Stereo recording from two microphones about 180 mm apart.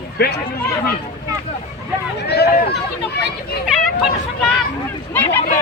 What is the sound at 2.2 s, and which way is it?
Speech, 65° left (ahead or behind).